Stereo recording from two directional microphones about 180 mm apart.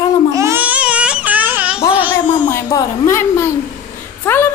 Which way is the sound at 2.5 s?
15° left (ahead or behind).